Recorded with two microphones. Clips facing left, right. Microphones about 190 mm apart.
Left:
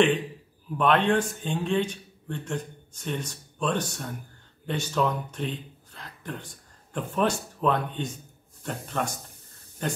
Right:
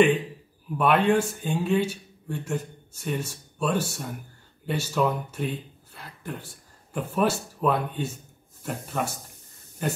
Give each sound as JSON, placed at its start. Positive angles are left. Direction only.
{"t": 0.7, "sound": "speech", "side_deg": -10}